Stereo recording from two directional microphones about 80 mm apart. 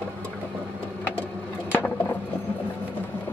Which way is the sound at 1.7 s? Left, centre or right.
Left.